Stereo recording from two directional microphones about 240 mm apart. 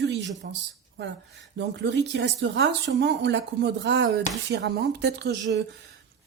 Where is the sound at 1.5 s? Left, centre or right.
Right.